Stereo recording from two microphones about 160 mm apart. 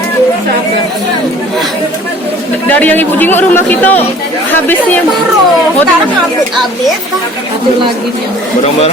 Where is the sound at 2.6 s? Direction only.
10° left (ahead or behind).